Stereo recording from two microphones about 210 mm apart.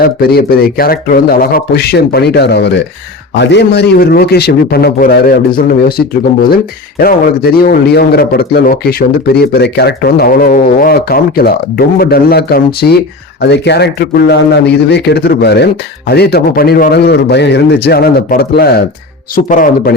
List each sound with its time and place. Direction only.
0.0 s a man's voice: 45° left (ahead or behind)
7.0 s a man's voice: 45° left (ahead or behind)